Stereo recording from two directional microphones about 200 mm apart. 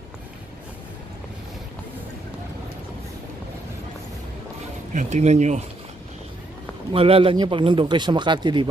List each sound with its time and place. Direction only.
4.9 s speech: 35° right (ahead or behind)
6.9 s speech: 30° right (ahead or behind)